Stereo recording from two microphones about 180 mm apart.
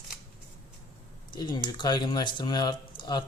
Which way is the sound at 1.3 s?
25° left (ahead or behind).